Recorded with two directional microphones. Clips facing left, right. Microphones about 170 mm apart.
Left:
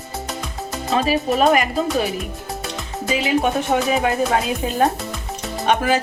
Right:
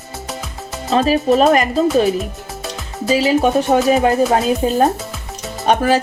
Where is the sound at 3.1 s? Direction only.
35° right (ahead or behind).